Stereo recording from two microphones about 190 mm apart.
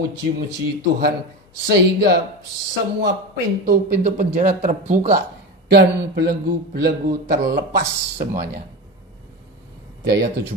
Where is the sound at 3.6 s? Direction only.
45° right (ahead or behind).